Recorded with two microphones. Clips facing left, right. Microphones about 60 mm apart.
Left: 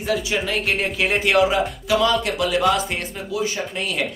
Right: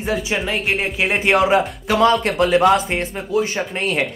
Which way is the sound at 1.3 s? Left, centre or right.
Right.